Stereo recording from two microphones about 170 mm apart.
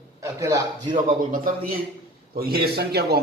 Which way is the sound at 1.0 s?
50° right (ahead or behind).